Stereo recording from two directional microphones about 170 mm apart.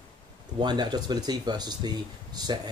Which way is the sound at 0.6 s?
25° right (ahead or behind).